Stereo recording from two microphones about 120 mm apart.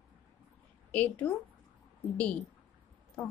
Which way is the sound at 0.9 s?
10° left (ahead or behind).